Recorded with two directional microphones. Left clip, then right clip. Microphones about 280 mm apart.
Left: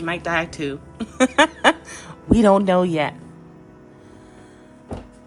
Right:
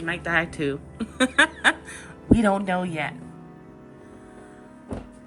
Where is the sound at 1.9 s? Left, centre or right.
Centre.